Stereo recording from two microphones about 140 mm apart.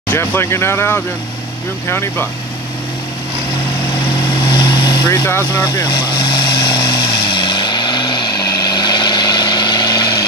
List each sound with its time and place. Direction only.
0.1 s speech: 15° left (ahead or behind)
4.5 s vehicle: 30° left (ahead or behind)
5.2 s speech: 15° left (ahead or behind)
5.9 s vehicle: 30° left (ahead or behind)